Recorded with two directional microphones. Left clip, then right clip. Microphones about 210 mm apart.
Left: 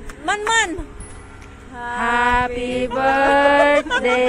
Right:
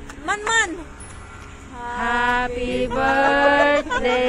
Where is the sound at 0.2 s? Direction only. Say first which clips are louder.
Left 2 dB; 45° left (ahead or behind).